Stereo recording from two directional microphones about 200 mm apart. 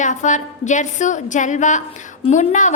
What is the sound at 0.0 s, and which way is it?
A woman's voice, 40° left (ahead or behind).